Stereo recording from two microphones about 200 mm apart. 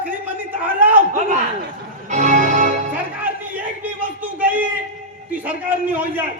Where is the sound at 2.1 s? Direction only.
35° right (ahead or behind).